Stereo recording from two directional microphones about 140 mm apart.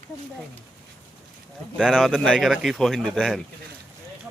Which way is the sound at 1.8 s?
5° right (ahead or behind).